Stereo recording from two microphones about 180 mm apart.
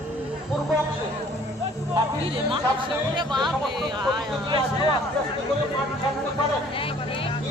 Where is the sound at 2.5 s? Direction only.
25° right (ahead or behind).